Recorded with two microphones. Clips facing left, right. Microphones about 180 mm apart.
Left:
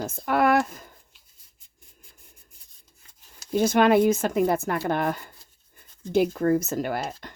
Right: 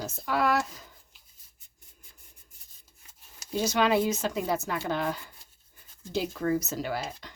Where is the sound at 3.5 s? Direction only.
55° left (ahead or behind).